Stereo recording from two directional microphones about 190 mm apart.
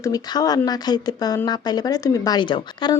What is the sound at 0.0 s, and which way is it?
Speech, 20° left (ahead or behind).